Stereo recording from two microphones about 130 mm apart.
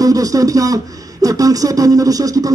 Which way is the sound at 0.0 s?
25° right (ahead or behind).